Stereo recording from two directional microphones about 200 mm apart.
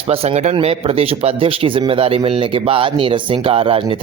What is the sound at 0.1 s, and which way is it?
Speech, 30° right (ahead or behind).